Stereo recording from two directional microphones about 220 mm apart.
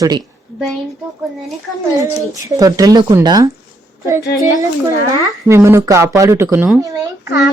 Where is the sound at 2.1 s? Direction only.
15° right (ahead or behind).